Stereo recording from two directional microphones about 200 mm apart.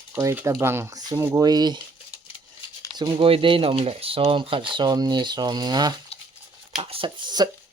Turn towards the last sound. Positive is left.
turn(degrees=-20)  # may be behind; listen again after turning